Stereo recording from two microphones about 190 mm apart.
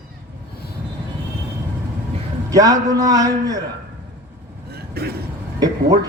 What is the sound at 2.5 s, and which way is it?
A man's voice, 20° right (ahead or behind).